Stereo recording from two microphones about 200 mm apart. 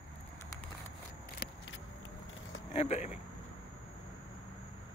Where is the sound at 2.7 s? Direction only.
30° left (ahead or behind).